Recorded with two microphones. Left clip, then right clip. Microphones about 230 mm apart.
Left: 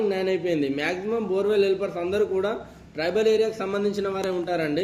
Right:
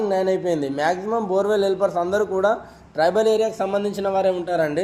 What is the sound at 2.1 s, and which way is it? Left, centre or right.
Speech, centre.